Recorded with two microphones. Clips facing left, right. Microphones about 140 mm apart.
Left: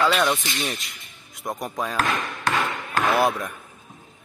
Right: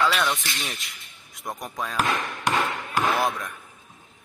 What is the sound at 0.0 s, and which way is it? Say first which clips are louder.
Speech: left 3 dB; centre (ahead or behind).